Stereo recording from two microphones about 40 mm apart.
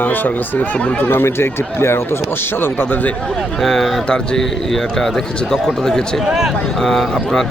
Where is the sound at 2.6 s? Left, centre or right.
Left.